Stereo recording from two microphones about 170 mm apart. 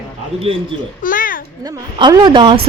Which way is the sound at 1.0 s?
55° left (ahead or behind).